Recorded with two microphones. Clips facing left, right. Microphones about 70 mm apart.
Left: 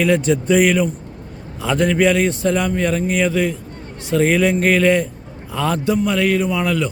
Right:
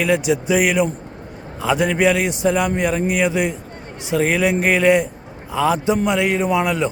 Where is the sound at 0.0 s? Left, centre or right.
Centre.